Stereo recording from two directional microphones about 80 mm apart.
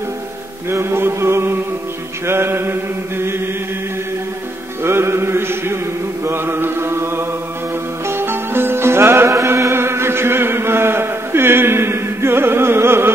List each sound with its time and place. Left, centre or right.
0.7 s chant: right
2.2 s mantra: right
4.8 s chant: right
8.1 s music: right
9.3 s chant: right